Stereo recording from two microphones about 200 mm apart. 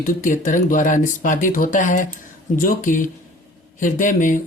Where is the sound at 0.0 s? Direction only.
40° left (ahead or behind).